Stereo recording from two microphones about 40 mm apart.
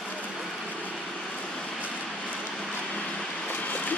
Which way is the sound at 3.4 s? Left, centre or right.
Left.